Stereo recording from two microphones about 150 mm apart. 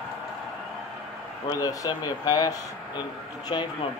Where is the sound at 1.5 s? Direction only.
25° left (ahead or behind).